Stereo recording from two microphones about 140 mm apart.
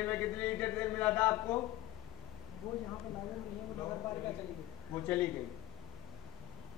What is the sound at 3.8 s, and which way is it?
A man's voice, 20° left (ahead or behind).